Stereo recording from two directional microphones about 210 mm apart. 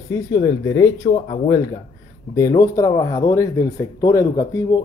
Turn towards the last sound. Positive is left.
turn(degrees=15)  # may be behind; listen again after turning